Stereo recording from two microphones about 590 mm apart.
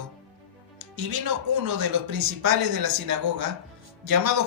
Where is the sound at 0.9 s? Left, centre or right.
Right.